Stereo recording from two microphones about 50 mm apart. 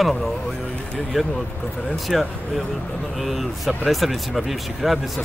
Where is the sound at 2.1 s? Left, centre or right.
Centre.